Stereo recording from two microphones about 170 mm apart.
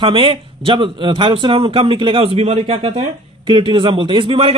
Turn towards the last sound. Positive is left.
turn(degrees=-35)  # may be behind; listen again after turning